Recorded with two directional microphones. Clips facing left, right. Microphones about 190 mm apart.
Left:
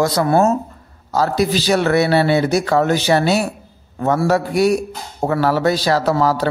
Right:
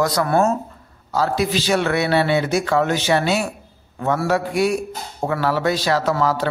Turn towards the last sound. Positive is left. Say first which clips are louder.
# left 3 dB
turn(degrees=35)  # may be behind; listen again after turning